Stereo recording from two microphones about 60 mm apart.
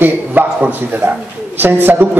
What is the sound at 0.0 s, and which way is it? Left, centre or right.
Speech, right.